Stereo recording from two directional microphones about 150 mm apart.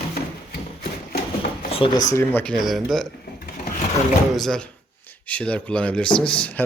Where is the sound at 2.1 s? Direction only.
15° left (ahead or behind).